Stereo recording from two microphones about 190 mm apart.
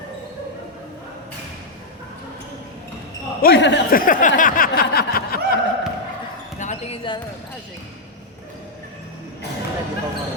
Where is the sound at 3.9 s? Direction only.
45° left (ahead or behind).